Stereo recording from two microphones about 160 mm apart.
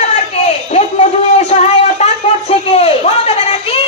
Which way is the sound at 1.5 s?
40° left (ahead or behind).